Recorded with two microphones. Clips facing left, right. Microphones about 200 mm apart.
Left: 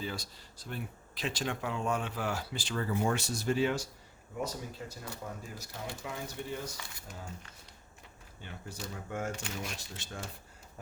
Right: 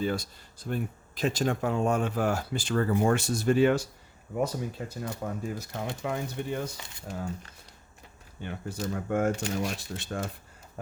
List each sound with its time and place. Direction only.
0.0 s speech: 55° right (ahead or behind)
6.7 s speech: 25° right (ahead or behind)
8.4 s speech: 55° right (ahead or behind)